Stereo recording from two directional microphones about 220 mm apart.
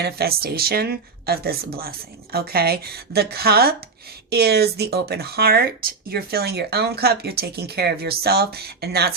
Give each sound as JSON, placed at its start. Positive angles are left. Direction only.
{"t": 0.0, "sound": "speech", "side_deg": -45}